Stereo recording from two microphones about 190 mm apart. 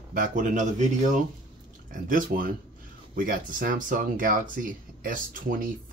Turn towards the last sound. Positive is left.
turn(degrees=-45)  # may be behind; listen again after turning